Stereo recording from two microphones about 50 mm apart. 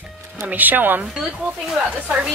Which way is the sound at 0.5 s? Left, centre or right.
Right.